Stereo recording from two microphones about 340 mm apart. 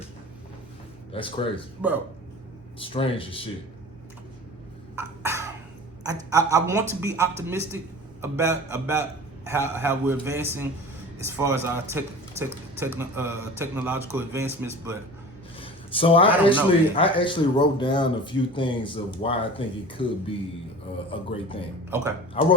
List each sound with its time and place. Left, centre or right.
1.1 s speech: centre
1.8 s speech: centre
2.7 s speech: centre
4.9 s cough: centre
6.0 s a man's voice: centre
15.5 s a man's voice: centre
21.8 s a man's voice: centre
22.4 s speech: centre